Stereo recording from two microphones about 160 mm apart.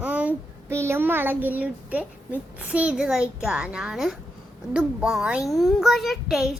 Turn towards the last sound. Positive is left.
turn(degrees=0)  # may be behind; listen again after turning